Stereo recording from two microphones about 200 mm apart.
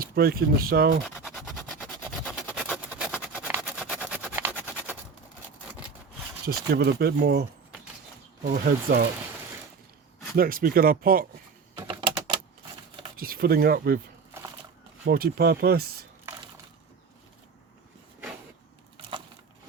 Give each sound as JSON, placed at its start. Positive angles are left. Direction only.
{"t": 0.0, "sound": "speech", "side_deg": -50}
{"t": 2.0, "sound": "a sound", "side_deg": 0}
{"t": 2.5, "sound": "vehicle", "side_deg": -5}
{"t": 6.5, "sound": "speech", "side_deg": -55}
{"t": 8.4, "sound": "speech", "side_deg": -45}
{"t": 10.3, "sound": "speech", "side_deg": -45}
{"t": 11.9, "sound": "typing", "side_deg": -25}
{"t": 13.1, "sound": "speech", "side_deg": -45}
{"t": 15.0, "sound": "speech", "side_deg": -50}